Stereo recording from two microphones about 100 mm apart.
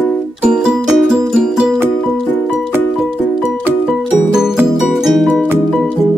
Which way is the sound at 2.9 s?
5° right (ahead or behind).